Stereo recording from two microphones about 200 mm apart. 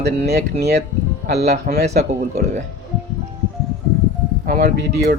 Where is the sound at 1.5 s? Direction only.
45° right (ahead or behind).